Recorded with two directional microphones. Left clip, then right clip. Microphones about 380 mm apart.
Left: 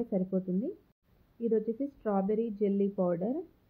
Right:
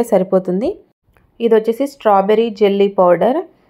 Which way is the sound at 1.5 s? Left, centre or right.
Centre.